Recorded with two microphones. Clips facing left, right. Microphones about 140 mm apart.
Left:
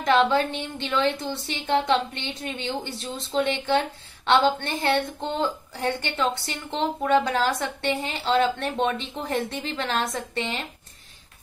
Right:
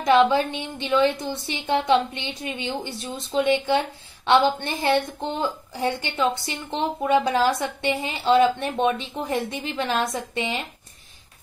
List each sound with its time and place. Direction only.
0.0 s a woman's voice: 10° right (ahead or behind)